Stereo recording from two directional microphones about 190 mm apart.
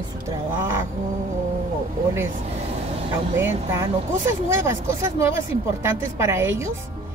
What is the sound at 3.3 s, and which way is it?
Speech, 15° right (ahead or behind).